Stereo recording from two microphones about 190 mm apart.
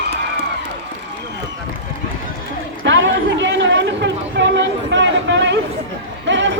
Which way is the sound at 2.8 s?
80° right.